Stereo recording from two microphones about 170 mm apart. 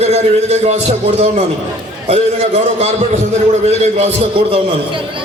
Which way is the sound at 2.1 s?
40° right (ahead or behind).